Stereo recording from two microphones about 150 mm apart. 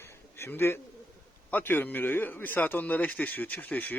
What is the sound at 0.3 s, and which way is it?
A man's voice, 15° left (ahead or behind).